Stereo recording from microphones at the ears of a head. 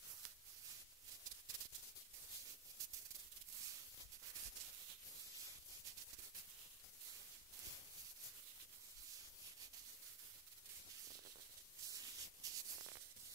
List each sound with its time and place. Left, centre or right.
1.2 s maraca: right
4.3 s rub: right
11.8 s a sound: right